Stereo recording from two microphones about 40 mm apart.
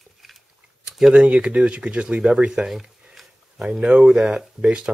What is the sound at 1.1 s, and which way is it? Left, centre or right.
Speech, right.